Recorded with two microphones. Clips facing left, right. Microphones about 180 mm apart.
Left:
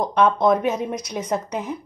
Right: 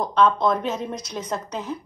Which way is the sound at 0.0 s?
15° left (ahead or behind).